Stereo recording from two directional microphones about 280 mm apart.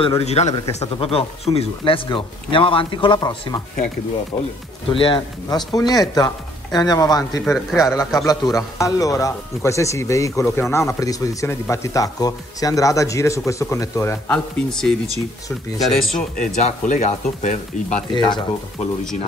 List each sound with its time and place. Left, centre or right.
0.0 s speech: left; by 15.0 s centre
16.2 s speech: left